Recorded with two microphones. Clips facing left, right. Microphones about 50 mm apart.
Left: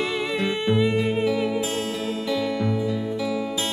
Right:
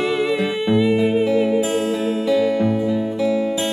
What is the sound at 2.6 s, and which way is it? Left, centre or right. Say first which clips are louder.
Music: right 6 dB; right.